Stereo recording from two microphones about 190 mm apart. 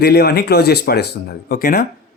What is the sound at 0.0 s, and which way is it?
Speech, 55° left (ahead or behind).